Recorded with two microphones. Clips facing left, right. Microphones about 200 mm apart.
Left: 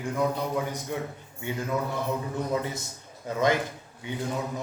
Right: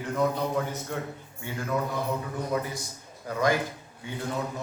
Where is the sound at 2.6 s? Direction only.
25° left (ahead or behind).